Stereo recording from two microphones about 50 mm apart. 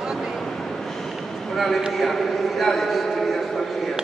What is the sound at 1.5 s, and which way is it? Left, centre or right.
A man's voice, centre.